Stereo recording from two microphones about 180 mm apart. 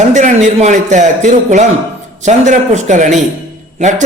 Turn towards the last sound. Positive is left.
turn(degrees=-40)  # may be behind; listen again after turning